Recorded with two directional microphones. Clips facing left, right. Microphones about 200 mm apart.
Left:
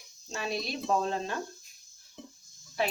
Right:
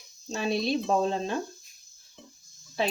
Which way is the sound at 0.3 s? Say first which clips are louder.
Right 7 dB; 30° right (ahead or behind).